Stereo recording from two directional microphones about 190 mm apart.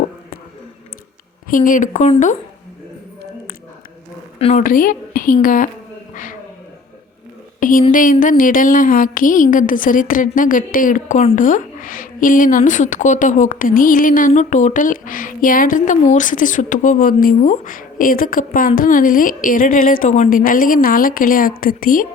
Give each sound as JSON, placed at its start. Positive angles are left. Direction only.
{"t": 1.5, "sound": "speech", "side_deg": 45}
{"t": 4.4, "sound": "a woman's voice", "side_deg": 30}
{"t": 4.6, "sound": "speech", "side_deg": 45}
{"t": 7.6, "sound": "speech", "side_deg": 45}